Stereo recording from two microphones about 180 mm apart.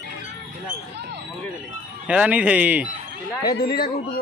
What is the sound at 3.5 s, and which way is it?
Speech, 60° left (ahead or behind).